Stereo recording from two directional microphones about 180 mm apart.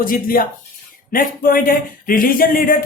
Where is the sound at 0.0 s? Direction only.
50° left (ahead or behind).